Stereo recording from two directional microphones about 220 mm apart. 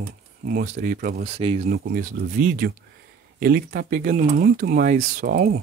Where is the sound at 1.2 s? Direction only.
25° right (ahead or behind).